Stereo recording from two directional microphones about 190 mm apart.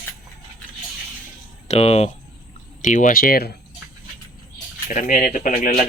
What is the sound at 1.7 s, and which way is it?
Speech, 35° left (ahead or behind).